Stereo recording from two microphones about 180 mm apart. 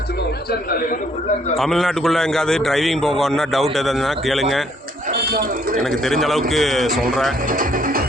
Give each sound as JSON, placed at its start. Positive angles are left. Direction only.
{"t": 1.5, "sound": "a man's voice", "side_deg": 0}
{"t": 5.1, "sound": "a sound", "side_deg": -55}
{"t": 6.1, "sound": "a man's voice", "side_deg": 0}
{"t": 7.5, "sound": "speech", "side_deg": -50}